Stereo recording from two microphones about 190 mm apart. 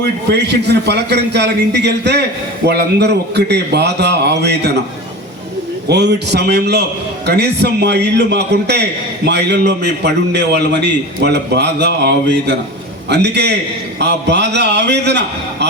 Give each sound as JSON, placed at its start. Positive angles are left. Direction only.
{"t": 0.0, "sound": "a man's voice", "side_deg": -65}
{"t": 5.9, "sound": "a man's voice", "side_deg": -60}